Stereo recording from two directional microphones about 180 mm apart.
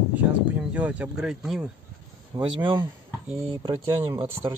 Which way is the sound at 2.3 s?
20° right (ahead or behind).